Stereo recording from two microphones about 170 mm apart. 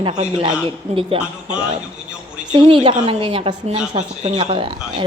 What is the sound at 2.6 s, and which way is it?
Speech, 30° right (ahead or behind).